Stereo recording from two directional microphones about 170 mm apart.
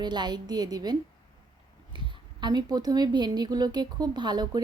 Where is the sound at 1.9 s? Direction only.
25° right (ahead or behind).